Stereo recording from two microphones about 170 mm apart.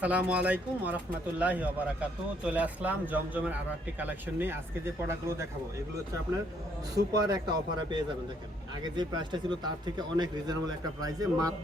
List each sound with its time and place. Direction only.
0.0 s a man's voice: 10° right (ahead or behind)
6.9 s speech: 20° right (ahead or behind)